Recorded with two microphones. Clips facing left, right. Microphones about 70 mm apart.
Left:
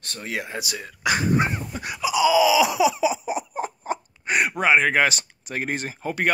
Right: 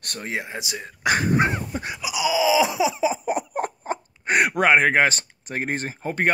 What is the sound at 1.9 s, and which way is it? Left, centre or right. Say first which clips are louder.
Wail: left 6 dB; centre.